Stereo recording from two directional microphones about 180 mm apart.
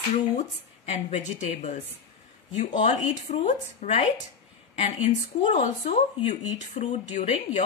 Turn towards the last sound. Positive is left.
turn(degrees=40)  # may be behind; listen again after turning